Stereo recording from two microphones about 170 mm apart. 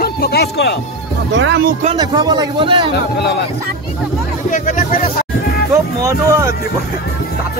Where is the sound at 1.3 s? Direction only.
90° right.